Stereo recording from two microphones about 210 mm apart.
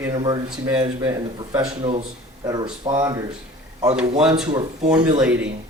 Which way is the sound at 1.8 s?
30° right (ahead or behind).